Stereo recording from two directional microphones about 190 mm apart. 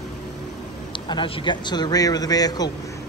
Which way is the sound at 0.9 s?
25° left (ahead or behind).